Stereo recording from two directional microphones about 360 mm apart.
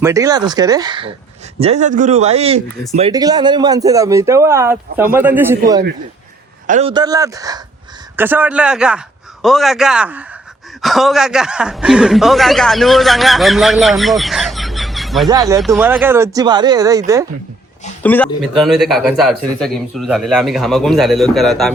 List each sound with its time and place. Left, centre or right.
0.0 s a man's voice: centre
18.0 s a man's voice: centre